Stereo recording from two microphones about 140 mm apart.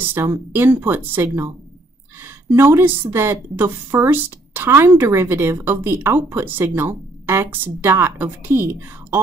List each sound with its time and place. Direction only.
0.1 s a woman's voice: 15° right (ahead or behind)